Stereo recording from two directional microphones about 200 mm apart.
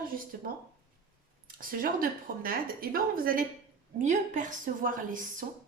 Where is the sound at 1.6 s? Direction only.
45° right (ahead or behind).